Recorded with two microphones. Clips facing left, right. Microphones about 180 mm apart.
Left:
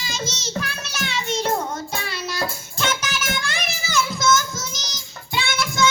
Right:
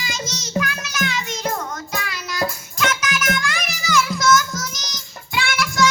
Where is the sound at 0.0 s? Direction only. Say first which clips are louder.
Even; 30° left (ahead or behind).